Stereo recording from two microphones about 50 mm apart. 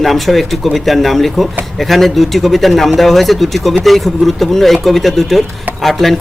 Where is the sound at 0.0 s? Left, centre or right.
Centre.